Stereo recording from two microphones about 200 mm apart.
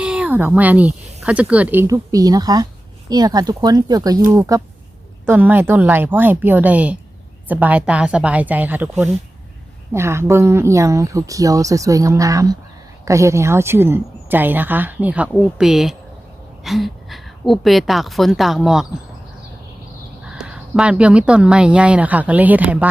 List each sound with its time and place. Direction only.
0.0 s speech: 5° right (ahead or behind)
20.2 s speech: 5° right (ahead or behind)